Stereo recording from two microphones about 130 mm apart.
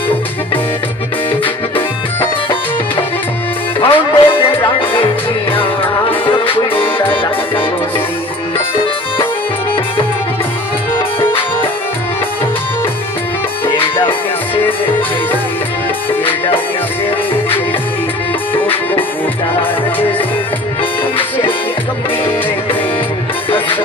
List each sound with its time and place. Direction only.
3.8 s music: 40° left (ahead or behind)
11.1 s music: 45° left (ahead or behind)
13.7 s music: 40° left (ahead or behind)
18.5 s music: 15° left (ahead or behind)